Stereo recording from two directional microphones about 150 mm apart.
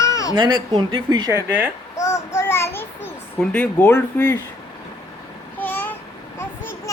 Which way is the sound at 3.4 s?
10° left (ahead or behind).